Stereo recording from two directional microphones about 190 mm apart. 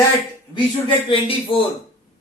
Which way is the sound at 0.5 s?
25° left (ahead or behind).